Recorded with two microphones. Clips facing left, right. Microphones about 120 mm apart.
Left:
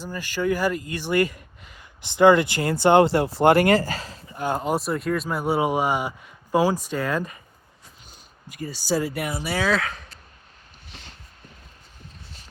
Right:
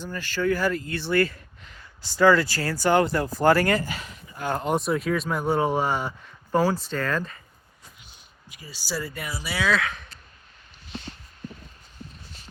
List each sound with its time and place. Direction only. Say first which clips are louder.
0.1 s speech: left 1 dB; 15° left (ahead or behind); by 4.2 s 35° left (ahead or behind)
4.4 s speech: left 2 dB; 15° left (ahead or behind)
4.6 s speech: even; centre (ahead or behind)
8.4 s speech: left 9 dB; 45° left (ahead or behind)
9.0 s speech: left 6 dB; 60° left (ahead or behind); by 10.1 s 35° left (ahead or behind)